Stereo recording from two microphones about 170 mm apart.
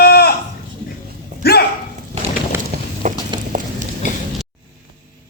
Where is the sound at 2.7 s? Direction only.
55° right (ahead or behind).